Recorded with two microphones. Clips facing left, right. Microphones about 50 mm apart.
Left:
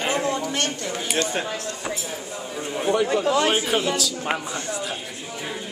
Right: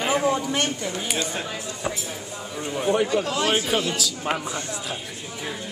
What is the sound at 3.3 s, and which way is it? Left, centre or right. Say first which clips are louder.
Speech: left 4 dB; left.